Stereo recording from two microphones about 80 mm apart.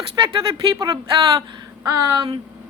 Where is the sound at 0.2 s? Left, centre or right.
Right.